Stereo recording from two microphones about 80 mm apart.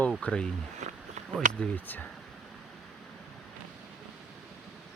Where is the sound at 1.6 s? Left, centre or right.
Left.